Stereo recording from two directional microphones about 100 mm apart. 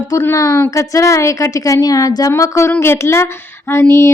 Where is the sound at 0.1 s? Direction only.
30° left (ahead or behind).